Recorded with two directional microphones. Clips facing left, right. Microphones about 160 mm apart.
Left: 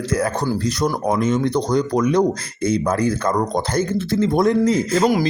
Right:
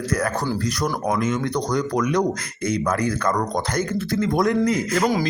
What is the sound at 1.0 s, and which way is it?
A man's voice, 30° left (ahead or behind).